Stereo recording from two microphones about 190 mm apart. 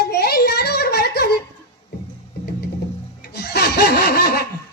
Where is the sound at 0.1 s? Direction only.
55° left (ahead or behind).